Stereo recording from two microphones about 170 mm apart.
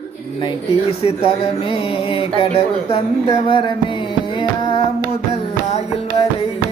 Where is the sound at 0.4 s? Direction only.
35° left (ahead or behind).